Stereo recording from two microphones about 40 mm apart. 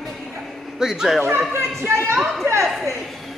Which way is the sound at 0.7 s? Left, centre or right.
Centre.